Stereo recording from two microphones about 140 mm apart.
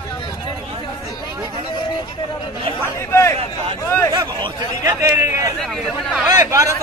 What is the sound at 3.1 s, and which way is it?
A man's voice, 20° left (ahead or behind).